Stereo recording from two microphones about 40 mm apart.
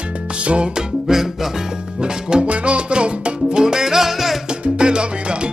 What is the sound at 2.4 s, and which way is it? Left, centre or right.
Music, right.